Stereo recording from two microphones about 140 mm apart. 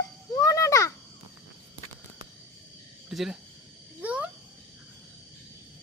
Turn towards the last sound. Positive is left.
turn(degrees=-10)  # may be behind; listen again after turning